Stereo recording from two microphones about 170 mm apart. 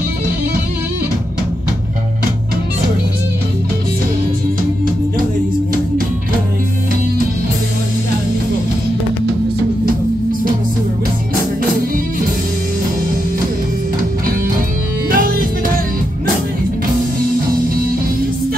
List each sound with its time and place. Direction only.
15.0 s music: 60° right (ahead or behind)